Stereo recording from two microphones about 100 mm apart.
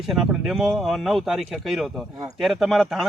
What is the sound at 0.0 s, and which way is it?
Speech, centre (ahead or behind).